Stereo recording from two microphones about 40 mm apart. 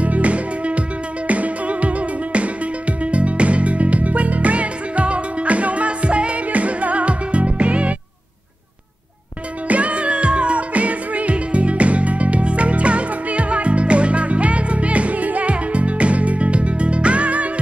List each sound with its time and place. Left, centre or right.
0.0 s music: right
9.7 s music: right